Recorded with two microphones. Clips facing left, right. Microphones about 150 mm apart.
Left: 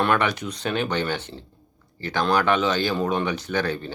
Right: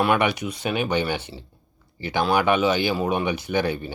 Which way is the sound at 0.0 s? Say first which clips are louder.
Right 1 dB; 10° right (ahead or behind).